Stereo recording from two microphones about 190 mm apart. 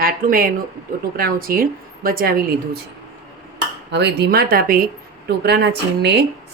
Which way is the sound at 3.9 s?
60° right (ahead or behind).